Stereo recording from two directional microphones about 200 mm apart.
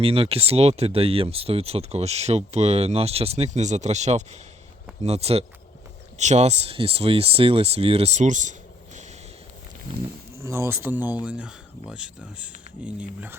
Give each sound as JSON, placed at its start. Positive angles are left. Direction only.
{"t": 0.0, "sound": "speech", "side_deg": -30}
{"t": 10.4, "sound": "speech", "side_deg": -15}